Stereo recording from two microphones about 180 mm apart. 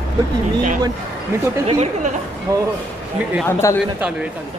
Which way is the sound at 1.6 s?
35° right (ahead or behind).